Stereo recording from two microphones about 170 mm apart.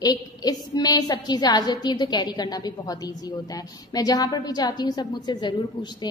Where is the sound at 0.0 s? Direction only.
25° left (ahead or behind).